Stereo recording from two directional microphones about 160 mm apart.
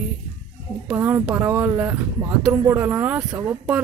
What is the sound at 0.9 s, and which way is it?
Speech, 10° right (ahead or behind).